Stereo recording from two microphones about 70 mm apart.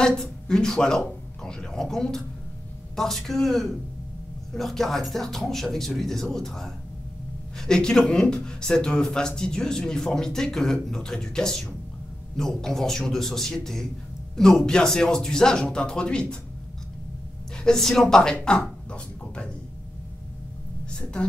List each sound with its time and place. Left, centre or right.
0.0 s a man's voice: centre
17.6 s speech: centre
20.9 s a woman's voice: centre